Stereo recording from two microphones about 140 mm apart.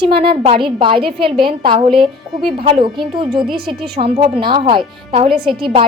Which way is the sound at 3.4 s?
Centre (ahead or behind).